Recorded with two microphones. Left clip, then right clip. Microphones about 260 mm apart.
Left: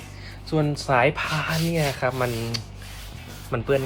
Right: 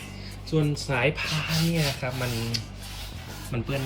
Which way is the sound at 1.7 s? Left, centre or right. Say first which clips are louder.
Left 5 dB; left.